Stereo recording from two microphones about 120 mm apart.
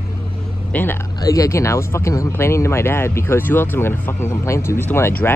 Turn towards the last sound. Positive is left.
turn(degrees=15)  # may be behind; listen again after turning